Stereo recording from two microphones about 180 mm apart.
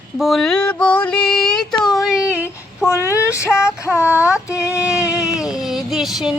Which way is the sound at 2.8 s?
15° left (ahead or behind).